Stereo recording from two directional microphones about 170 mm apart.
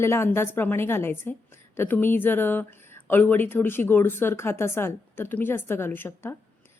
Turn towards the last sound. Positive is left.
turn(degrees=15)  # may be behind; listen again after turning